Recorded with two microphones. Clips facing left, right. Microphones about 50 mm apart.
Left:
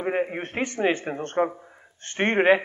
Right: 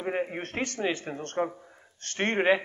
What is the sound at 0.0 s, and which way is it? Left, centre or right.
A man's voice, centre.